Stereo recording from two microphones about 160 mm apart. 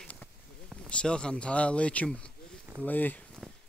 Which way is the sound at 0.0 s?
10° left (ahead or behind).